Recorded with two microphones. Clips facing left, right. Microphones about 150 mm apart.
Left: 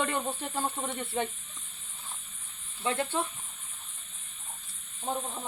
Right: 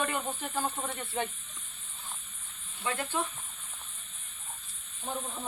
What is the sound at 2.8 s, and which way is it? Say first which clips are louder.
Speech: left 3 dB; 25° left (ahead or behind).